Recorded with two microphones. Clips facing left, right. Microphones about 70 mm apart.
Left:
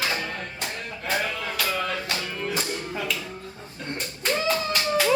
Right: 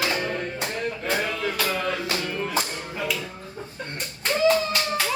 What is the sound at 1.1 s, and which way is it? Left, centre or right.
Music, centre.